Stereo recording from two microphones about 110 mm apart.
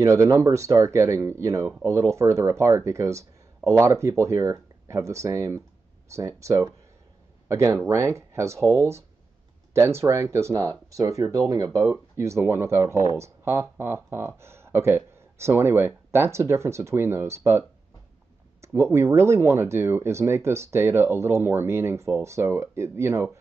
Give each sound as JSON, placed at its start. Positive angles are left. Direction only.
{"t": 0.0, "sound": "speech", "side_deg": -30}
{"t": 18.6, "sound": "speech", "side_deg": -25}